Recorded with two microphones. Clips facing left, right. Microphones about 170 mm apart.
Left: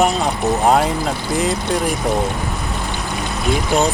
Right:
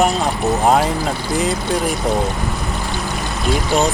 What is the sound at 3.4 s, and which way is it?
Speech, centre (ahead or behind).